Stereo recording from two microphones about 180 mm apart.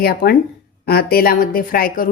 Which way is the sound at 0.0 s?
55° left (ahead or behind).